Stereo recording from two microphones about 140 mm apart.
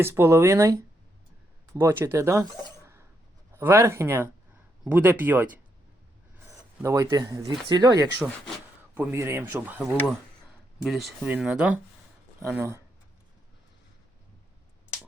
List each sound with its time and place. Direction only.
0.0 s speech: 20° right (ahead or behind)
2.4 s a sound: 20° right (ahead or behind)
3.5 s speech: 15° right (ahead or behind)
6.8 s speech: 25° right (ahead or behind)
9.0 s speech: 15° right (ahead or behind)
10.8 s speech: centre (ahead or behind); by 12.8 s 15° right (ahead or behind)